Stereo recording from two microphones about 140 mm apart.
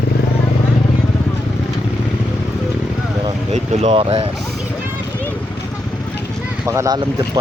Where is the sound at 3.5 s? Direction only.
45° right (ahead or behind).